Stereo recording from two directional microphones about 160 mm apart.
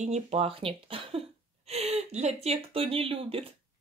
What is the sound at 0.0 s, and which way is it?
A woman's voice, 40° right (ahead or behind).